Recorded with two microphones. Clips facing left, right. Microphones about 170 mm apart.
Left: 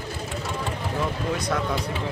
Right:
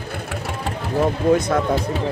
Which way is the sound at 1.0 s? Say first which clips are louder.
Right 12 dB; 50° right (ahead or behind).